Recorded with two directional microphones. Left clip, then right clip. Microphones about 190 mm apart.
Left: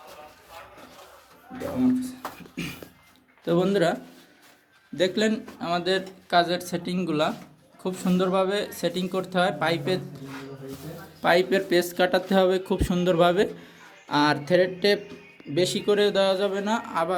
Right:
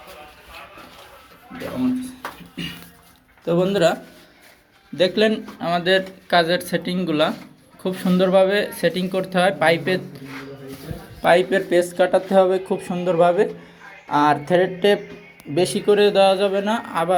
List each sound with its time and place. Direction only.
3.4 s speech: 20° left (ahead or behind)
4.9 s speech: 10° left (ahead or behind)
11.2 s speech: 15° left (ahead or behind)
14.4 s music: 10° left (ahead or behind)
15.5 s speech: 5° left (ahead or behind)